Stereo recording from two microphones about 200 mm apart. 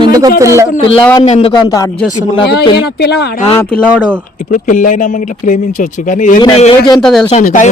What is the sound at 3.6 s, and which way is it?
Speech, 5° left (ahead or behind).